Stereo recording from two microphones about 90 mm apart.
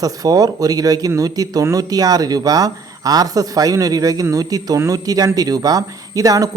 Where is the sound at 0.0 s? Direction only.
45° right (ahead or behind).